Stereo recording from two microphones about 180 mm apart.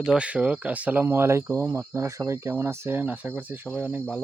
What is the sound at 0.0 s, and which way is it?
Speech, 5° right (ahead or behind).